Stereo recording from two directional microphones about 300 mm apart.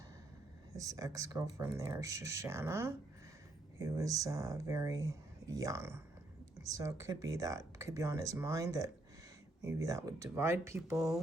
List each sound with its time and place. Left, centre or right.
0.8 s speech: centre